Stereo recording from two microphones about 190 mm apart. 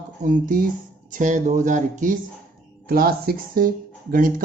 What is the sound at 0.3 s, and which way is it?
Speech, 45° right (ahead or behind).